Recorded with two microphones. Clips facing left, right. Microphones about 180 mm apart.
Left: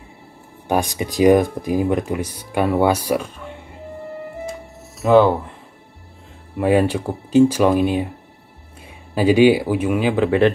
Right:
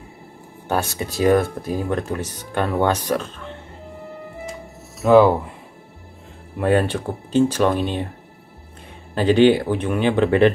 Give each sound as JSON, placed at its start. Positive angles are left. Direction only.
{"t": 0.7, "sound": "speech", "side_deg": 15}
{"t": 5.0, "sound": "speech", "side_deg": 0}
{"t": 6.6, "sound": "speech", "side_deg": 10}
{"t": 9.1, "sound": "speech", "side_deg": 10}